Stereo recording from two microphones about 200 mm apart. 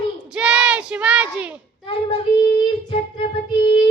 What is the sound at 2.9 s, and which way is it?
Music, 25° left (ahead or behind).